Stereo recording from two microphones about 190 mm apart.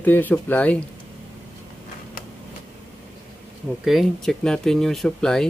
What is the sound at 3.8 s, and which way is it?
Speech, centre (ahead or behind).